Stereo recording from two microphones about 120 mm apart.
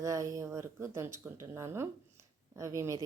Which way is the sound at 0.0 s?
25° right (ahead or behind).